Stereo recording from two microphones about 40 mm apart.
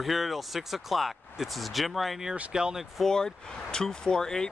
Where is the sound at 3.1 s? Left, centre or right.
Centre.